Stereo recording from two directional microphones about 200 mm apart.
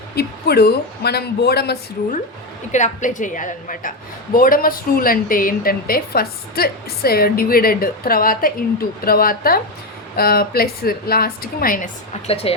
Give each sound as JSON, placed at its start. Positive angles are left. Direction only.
{"t": 0.2, "sound": "a woman's voice", "side_deg": 50}
{"t": 12.3, "sound": "speech", "side_deg": 30}